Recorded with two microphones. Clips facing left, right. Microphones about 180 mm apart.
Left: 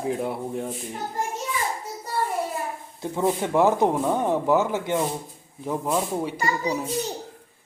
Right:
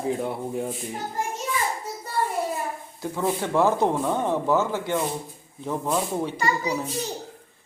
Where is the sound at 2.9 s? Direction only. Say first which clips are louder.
Left 2 dB; 20° left (ahead or behind).